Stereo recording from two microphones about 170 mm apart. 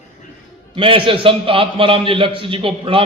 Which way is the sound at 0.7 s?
30° right (ahead or behind).